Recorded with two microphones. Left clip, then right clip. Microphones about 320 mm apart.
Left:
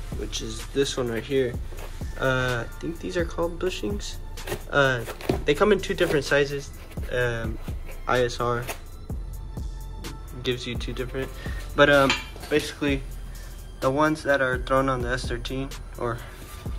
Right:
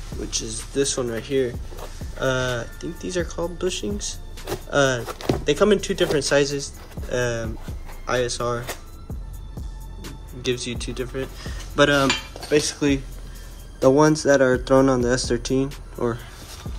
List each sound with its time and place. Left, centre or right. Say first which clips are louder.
0.2 s speech: right 4 dB; centre
10.4 s speech: right 3 dB; centre